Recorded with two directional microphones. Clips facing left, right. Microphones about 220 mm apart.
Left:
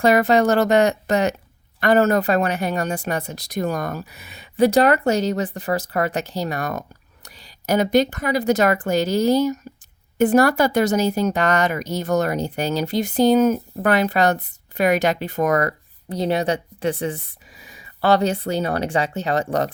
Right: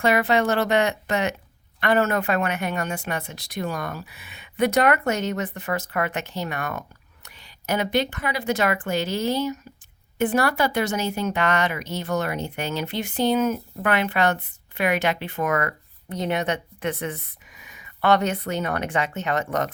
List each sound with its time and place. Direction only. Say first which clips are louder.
0.0 s speech: left 5 dB; 40° left (ahead or behind)